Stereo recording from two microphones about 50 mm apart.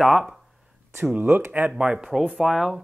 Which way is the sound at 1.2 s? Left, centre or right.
Right.